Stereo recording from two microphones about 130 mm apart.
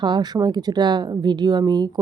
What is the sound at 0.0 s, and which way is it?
Speech, 35° right (ahead or behind).